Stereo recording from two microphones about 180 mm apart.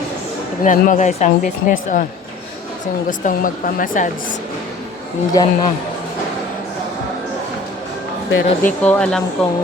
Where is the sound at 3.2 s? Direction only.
50° left (ahead or behind).